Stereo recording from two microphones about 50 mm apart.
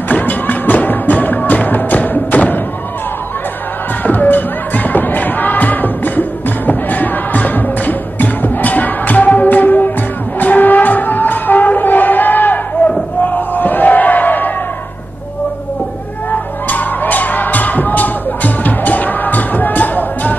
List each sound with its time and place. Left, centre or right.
0.1 s music: left
4.0 s music: left
13.2 s crowd: left
16.3 s music: left